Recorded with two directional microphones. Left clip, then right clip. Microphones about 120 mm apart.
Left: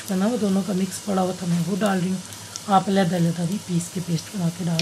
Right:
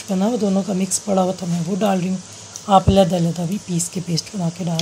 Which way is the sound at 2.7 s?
30° right (ahead or behind).